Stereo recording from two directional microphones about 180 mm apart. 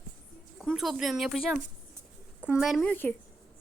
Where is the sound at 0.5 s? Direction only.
Centre (ahead or behind).